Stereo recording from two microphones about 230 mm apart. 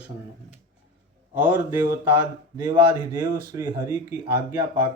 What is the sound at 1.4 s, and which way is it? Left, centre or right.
Speech, centre.